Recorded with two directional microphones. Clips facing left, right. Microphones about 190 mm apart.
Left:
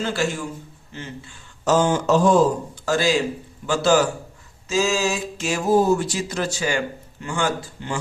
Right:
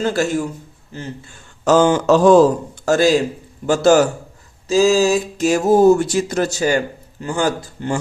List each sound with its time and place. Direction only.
0.0 s speech: 45° right (ahead or behind)
1.6 s speech: 90° right
2.8 s speech: 45° right (ahead or behind)